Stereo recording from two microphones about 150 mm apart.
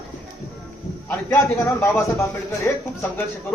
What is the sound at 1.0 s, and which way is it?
A man's voice, 15° left (ahead or behind).